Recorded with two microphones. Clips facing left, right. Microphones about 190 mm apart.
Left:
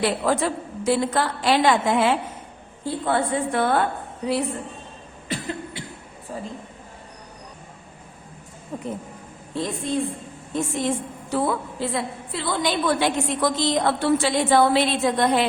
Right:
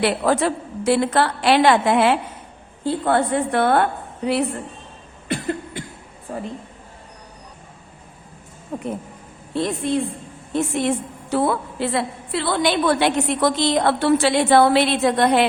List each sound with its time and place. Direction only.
0.0 s a woman's voice: 65° right (ahead or behind)
5.3 s cough: 55° right (ahead or behind)
8.7 s speech: 55° right (ahead or behind)
9.6 s a woman's voice: 70° right (ahead or behind)